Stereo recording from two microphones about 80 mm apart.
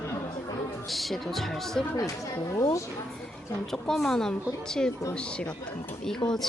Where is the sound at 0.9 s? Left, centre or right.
Centre.